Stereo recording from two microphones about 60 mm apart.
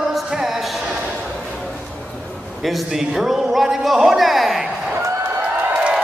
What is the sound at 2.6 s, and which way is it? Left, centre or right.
A man's voice, centre.